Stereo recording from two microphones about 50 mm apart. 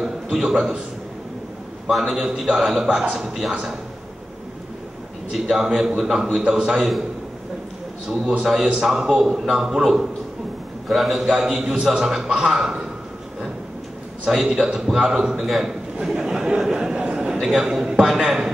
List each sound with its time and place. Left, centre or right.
0.0 s a man's voice: centre
2.0 s a man's voice: centre
5.3 s a man's voice: centre
8.1 s a man's voice: centre
14.3 s a man's voice: centre
17.0 s a sound: centre
17.5 s a man's voice: centre